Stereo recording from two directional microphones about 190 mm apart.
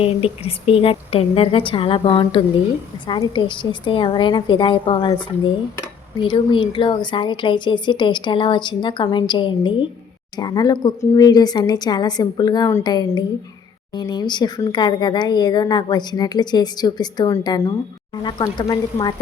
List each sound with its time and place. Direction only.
0.0 s speech: 30° left (ahead or behind)